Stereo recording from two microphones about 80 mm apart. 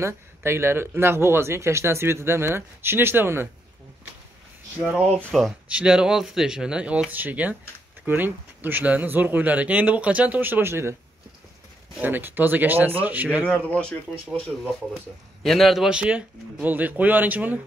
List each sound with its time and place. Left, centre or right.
0.0 s speech: right
5.3 s speech: centre
5.7 s a man's voice: centre; by 11.0 s right
12.0 s speech: right
13.5 s speech: centre
15.4 s a man's voice: centre; by 17.6 s right